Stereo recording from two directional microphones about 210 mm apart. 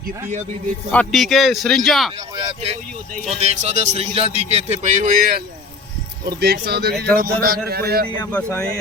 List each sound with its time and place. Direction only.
0.9 s speech: 5° left (ahead or behind)
2.3 s speech: 25° right (ahead or behind); by 8.0 s 45° right (ahead or behind)
8.2 s speech: 10° left (ahead or behind)